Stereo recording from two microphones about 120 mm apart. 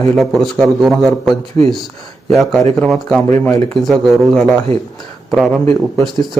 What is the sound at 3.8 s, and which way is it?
Speech, centre (ahead or behind).